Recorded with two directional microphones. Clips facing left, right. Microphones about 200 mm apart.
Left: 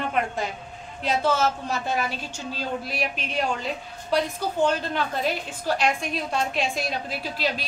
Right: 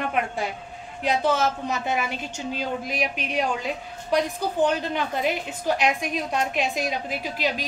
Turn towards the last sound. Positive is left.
turn(degrees=-15)  # may be behind; listen again after turning